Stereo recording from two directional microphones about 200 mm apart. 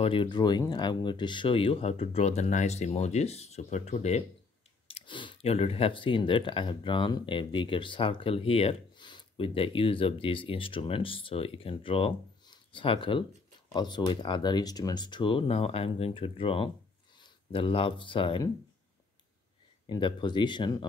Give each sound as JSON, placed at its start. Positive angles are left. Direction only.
{"t": 0.0, "sound": "speech", "side_deg": 25}
{"t": 19.9, "sound": "speech", "side_deg": 25}